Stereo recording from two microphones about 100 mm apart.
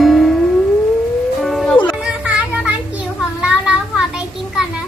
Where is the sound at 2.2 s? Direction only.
15° right (ahead or behind).